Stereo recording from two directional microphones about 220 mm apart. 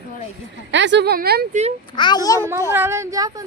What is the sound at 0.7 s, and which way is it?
Speech, 55° right (ahead or behind).